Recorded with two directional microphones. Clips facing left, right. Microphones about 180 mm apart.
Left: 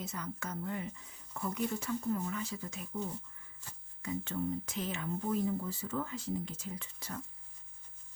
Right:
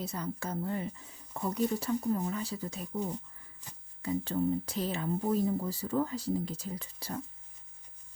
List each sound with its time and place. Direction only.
0.0 s speech: 35° right (ahead or behind)
3.6 s speech: 15° right (ahead or behind)
4.0 s speech: 35° right (ahead or behind)